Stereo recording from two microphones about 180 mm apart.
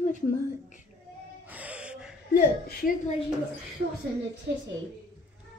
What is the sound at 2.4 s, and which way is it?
Speech, 55° left (ahead or behind).